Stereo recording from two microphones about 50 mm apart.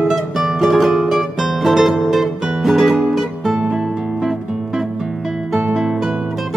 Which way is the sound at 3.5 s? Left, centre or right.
Centre.